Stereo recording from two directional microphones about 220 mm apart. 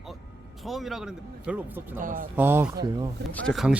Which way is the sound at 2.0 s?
40° right (ahead or behind).